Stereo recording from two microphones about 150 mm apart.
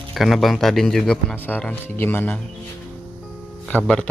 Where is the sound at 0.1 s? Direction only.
Centre (ahead or behind).